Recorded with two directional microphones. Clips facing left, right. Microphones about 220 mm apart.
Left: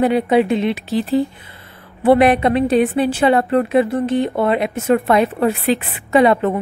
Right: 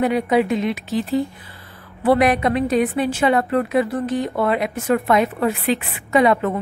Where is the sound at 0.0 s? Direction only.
30° left (ahead or behind).